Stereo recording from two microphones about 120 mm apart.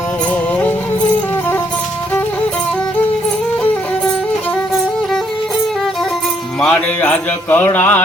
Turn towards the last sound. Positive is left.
turn(degrees=15)  # may be behind; listen again after turning